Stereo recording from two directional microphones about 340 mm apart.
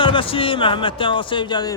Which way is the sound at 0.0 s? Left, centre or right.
Centre.